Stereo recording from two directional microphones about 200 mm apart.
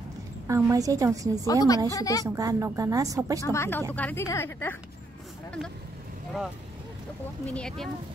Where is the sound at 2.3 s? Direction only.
15° right (ahead or behind).